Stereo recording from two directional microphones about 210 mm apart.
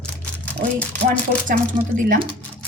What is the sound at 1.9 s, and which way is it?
Speech, 40° right (ahead or behind).